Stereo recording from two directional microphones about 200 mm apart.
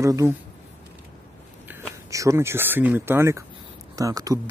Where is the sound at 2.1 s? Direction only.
15° right (ahead or behind).